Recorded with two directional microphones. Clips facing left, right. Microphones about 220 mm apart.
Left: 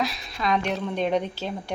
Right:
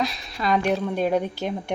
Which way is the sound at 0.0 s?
5° right (ahead or behind).